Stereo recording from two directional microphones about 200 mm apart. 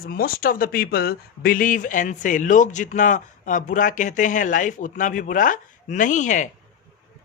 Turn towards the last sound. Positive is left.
turn(degrees=40)  # may be behind; listen again after turning